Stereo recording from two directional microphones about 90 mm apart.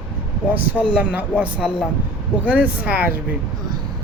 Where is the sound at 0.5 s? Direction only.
15° right (ahead or behind).